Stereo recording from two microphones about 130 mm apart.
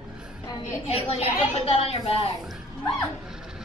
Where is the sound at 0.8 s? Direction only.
50° left (ahead or behind).